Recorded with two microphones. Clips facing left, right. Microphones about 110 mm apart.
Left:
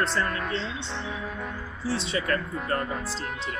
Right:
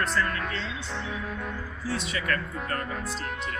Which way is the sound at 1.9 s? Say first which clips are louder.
Left 3 dB; 30° left (ahead or behind).